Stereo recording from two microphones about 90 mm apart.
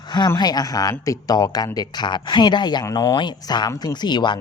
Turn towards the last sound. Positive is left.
turn(degrees=55)  # may be behind; listen again after turning